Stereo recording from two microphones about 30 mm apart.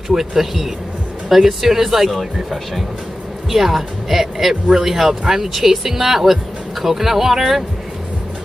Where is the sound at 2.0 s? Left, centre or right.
Centre.